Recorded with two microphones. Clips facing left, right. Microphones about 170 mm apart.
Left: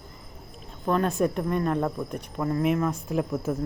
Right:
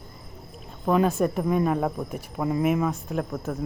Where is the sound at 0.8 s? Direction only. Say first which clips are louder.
Right 2 dB; 5° right (ahead or behind).